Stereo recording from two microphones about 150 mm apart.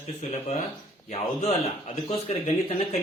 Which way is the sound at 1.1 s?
45° left (ahead or behind).